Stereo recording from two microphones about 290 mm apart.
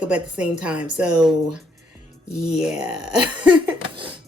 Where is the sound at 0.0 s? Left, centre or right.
Centre.